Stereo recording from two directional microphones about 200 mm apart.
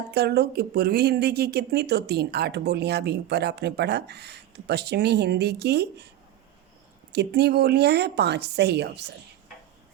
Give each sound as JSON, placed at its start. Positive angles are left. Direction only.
{"t": 0.1, "sound": "speech", "side_deg": -55}
{"t": 7.1, "sound": "speech", "side_deg": -55}